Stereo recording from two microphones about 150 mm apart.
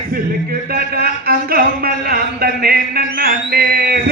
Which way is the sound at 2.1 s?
90° right.